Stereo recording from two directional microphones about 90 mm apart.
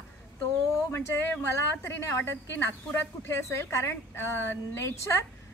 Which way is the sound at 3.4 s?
30° left (ahead or behind).